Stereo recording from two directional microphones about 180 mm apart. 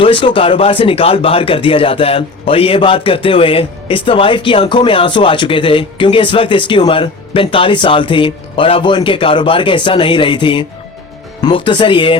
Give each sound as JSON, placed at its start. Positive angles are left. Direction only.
{"t": 0.0, "sound": "speech", "side_deg": 30}